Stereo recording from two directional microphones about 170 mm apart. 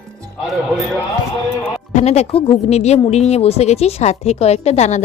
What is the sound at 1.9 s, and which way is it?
A woman's voice, 40° left (ahead or behind).